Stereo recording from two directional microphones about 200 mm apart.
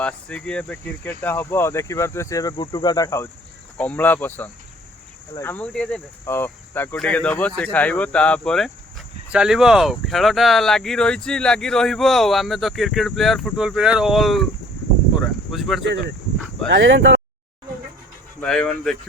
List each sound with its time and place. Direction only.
0.0 s speech: 5° left (ahead or behind)
15.2 s cricket: centre (ahead or behind)
15.8 s speech: 60° right (ahead or behind)
18.3 s speech: 5° left (ahead or behind)